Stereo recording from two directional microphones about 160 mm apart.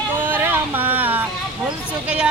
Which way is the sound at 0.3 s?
10° right (ahead or behind).